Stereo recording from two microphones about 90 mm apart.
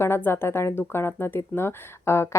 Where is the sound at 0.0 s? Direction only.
25° left (ahead or behind).